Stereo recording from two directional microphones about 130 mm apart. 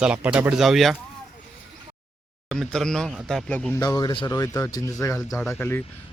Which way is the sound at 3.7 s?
30° left (ahead or behind).